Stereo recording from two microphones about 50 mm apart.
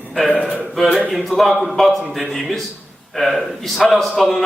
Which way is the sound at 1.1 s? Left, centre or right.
Centre.